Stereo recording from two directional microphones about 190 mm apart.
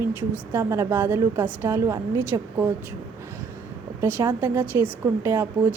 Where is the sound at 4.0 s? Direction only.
10° right (ahead or behind).